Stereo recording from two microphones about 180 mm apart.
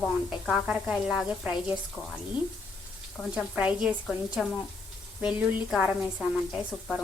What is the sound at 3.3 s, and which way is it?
A woman's voice, 5° right (ahead or behind).